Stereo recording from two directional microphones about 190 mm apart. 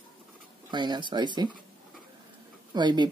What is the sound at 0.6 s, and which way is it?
Speech, 25° right (ahead or behind).